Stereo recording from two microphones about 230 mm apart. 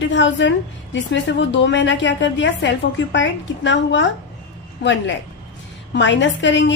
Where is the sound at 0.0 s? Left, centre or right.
Left.